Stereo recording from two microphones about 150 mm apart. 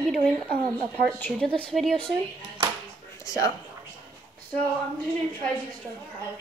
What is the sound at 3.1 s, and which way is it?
Speech, 25° left (ahead or behind).